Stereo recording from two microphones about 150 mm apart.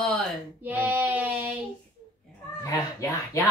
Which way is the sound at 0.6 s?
10° right (ahead or behind).